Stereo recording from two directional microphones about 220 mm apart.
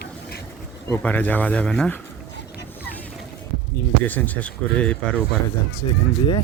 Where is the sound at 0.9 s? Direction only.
5° left (ahead or behind).